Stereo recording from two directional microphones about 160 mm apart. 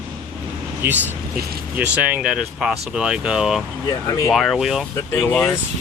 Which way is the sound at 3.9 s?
20° left (ahead or behind).